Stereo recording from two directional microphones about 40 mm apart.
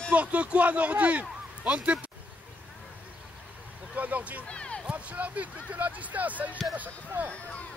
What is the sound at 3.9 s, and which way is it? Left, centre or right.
Speech, right.